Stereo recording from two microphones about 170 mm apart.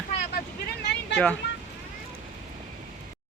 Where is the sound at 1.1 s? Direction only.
5° left (ahead or behind).